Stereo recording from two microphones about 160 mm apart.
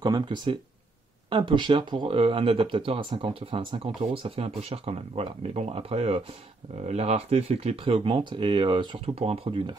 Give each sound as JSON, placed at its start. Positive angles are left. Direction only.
{"t": 0.0, "sound": "speech", "side_deg": -25}